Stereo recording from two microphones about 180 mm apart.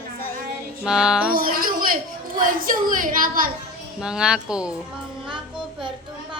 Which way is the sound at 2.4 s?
50° right (ahead or behind).